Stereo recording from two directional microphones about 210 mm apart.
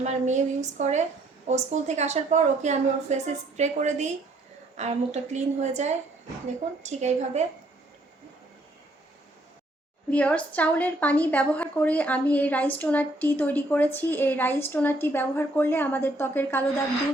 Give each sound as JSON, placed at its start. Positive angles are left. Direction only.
{"t": 0.0, "sound": "a woman's voice", "side_deg": -35}
{"t": 10.1, "sound": "a woman's voice", "side_deg": 5}